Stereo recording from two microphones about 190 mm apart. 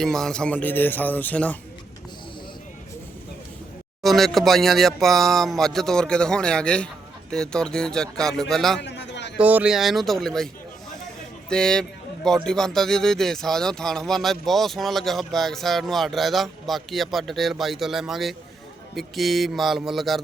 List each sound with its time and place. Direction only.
0.0 s speech: centre (ahead or behind)
4.0 s a man's voice: centre (ahead or behind)
8.8 s a sound: 65° left (ahead or behind)
9.4 s a man's voice: 10° right (ahead or behind)